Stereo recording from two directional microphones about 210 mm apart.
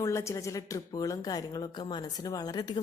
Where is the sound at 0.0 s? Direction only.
15° left (ahead or behind).